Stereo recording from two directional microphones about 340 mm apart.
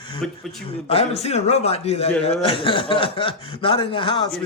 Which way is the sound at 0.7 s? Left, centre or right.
Centre.